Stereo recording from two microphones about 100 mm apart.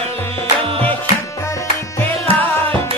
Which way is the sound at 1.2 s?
30° left (ahead or behind).